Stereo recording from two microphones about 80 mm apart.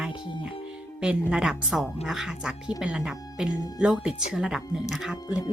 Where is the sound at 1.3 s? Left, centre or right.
Centre.